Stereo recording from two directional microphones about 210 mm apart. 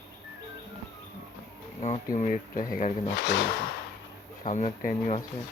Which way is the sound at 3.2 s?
55° left (ahead or behind).